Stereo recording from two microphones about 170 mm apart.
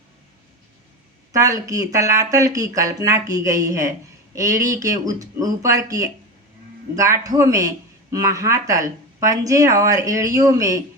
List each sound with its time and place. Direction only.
1.3 s speech: 20° right (ahead or behind)